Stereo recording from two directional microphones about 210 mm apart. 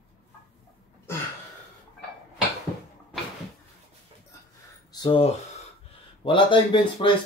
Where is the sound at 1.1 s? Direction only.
10° left (ahead or behind).